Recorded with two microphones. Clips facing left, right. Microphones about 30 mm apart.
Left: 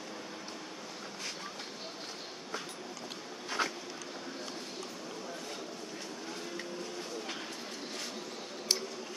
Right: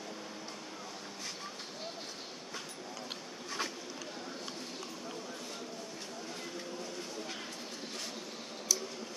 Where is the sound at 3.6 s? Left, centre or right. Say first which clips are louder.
Left 5 dB; left.